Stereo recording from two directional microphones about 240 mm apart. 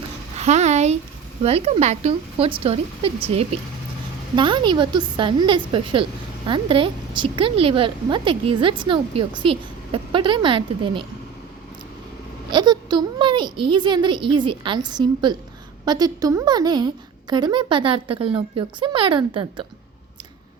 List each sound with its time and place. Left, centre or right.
0.3 s a woman's voice: right
12.5 s a woman's voice: centre